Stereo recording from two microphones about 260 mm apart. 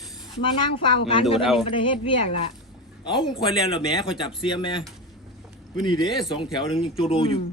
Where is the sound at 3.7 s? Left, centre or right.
Centre.